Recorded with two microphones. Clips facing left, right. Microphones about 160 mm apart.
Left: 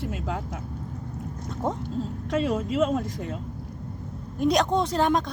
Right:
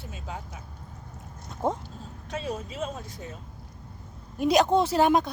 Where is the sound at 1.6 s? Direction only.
Centre (ahead or behind).